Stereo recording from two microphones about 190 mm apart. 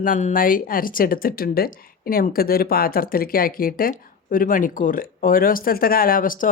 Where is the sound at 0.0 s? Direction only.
40° left (ahead or behind).